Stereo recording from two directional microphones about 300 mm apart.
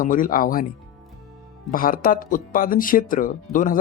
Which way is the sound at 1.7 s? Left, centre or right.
Left.